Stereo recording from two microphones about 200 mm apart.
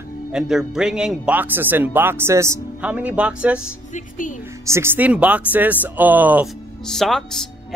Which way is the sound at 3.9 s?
40° left (ahead or behind).